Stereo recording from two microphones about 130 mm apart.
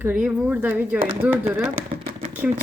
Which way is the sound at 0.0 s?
15° right (ahead or behind).